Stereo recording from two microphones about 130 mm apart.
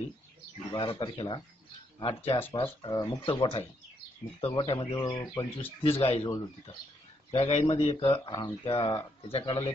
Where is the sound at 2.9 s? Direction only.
30° left (ahead or behind).